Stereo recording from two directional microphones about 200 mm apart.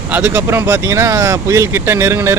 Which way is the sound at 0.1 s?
10° right (ahead or behind).